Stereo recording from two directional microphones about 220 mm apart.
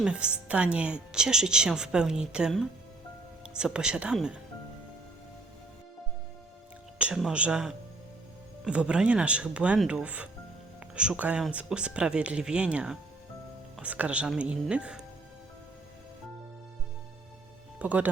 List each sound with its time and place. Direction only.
0.0 s speech: 5° right (ahead or behind)
7.0 s speech: 5° right (ahead or behind)
17.7 s speech: 5° right (ahead or behind)